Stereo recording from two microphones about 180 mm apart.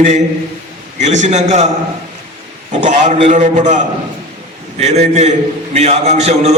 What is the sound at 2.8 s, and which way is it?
A man's voice, 35° right (ahead or behind).